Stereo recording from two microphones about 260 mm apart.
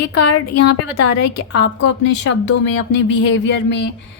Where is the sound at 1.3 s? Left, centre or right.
Left.